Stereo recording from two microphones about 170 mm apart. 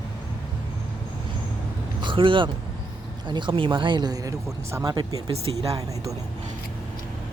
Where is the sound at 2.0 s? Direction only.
30° right (ahead or behind).